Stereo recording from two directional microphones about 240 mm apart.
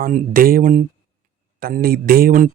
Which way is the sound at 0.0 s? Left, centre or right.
Right.